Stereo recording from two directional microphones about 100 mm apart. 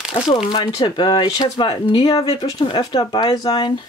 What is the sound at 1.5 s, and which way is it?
Speech, 50° left (ahead or behind).